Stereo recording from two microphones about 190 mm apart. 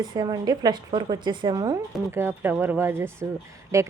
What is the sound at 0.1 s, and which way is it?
A woman's voice, 20° right (ahead or behind).